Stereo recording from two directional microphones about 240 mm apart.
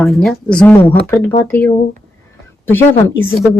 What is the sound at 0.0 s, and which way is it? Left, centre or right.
Speech, centre.